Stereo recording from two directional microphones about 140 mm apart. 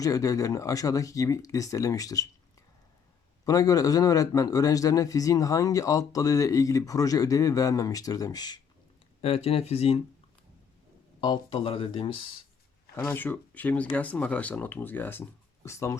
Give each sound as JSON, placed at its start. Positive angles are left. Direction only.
{"t": 0.0, "sound": "a man's voice", "side_deg": 25}
{"t": 3.4, "sound": "a man's voice", "side_deg": 25}
{"t": 9.2, "sound": "speech", "side_deg": 45}
{"t": 11.2, "sound": "speech", "side_deg": 35}
{"t": 13.1, "sound": "speech", "side_deg": 15}